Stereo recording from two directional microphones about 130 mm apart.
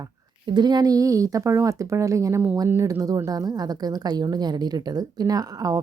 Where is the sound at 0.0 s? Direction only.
35° right (ahead or behind).